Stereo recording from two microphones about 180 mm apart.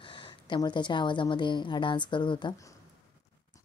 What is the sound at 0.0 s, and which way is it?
A woman's voice, 25° left (ahead or behind).